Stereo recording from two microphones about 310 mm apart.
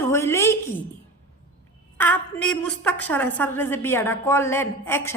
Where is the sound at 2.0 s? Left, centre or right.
Centre.